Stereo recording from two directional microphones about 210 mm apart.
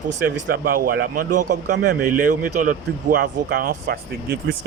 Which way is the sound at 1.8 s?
40° right (ahead or behind).